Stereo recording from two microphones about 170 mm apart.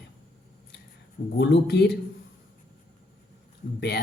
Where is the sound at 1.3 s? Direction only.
90° left.